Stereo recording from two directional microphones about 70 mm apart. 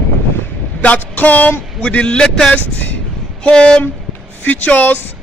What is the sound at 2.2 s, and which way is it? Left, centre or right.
A man's voice, centre.